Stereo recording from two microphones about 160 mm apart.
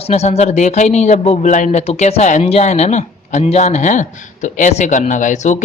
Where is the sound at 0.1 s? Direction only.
45° left (ahead or behind).